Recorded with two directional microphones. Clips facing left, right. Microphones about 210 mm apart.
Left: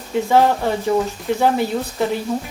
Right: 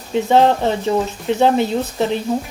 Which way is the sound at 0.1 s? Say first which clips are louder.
Right 2 dB; 20° right (ahead or behind).